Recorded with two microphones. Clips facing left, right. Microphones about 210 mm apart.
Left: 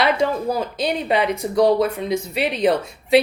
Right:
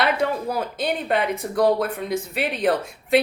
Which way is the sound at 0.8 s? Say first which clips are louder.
Left 1 dB; 50° right (ahead or behind).